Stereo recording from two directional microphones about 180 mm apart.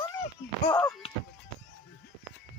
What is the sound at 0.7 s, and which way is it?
Speech, 5° left (ahead or behind).